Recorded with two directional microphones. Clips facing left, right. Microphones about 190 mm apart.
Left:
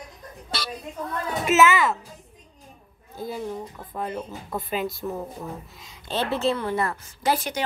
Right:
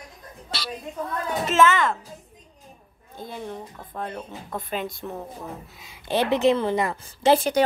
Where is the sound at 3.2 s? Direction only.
5° left (ahead or behind).